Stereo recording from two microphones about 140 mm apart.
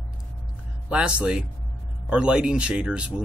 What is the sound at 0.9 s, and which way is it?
Speech, 5° right (ahead or behind).